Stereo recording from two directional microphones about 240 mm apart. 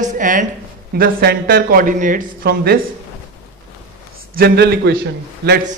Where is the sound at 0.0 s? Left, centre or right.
Right.